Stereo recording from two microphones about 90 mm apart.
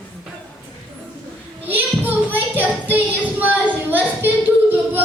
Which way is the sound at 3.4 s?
20° right (ahead or behind).